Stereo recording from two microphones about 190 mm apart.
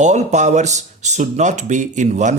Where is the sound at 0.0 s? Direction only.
35° right (ahead or behind).